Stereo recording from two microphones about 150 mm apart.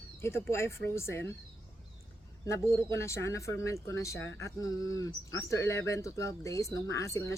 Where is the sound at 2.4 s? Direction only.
20° left (ahead or behind).